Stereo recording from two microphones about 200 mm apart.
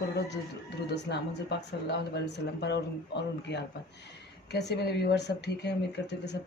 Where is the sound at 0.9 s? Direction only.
60° left (ahead or behind).